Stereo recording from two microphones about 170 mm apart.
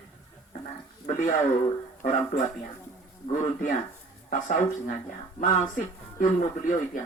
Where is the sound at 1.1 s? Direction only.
50° left (ahead or behind).